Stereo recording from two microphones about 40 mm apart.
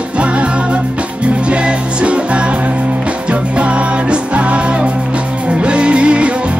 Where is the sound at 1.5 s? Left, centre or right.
Right.